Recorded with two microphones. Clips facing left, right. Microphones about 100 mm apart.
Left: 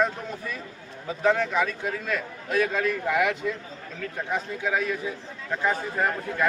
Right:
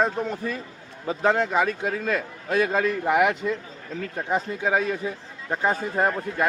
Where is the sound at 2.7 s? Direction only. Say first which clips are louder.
Right 3 dB; 35° right (ahead or behind).